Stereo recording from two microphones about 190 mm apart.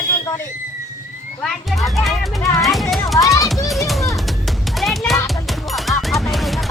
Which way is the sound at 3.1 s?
15° left (ahead or behind).